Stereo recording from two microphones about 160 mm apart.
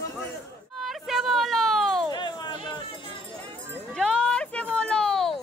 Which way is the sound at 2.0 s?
30° left (ahead or behind).